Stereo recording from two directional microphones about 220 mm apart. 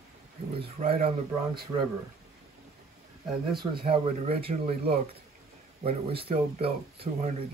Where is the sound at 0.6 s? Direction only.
30° right (ahead or behind).